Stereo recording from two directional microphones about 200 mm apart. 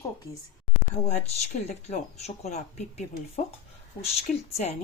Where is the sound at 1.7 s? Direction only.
30° left (ahead or behind).